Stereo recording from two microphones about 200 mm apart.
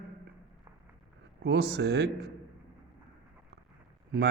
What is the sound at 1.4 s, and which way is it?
Speech, 55° right (ahead or behind).